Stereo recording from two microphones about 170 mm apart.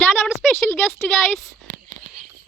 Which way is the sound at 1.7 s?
45° right (ahead or behind).